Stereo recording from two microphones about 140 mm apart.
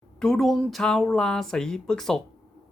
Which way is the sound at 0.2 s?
5° left (ahead or behind).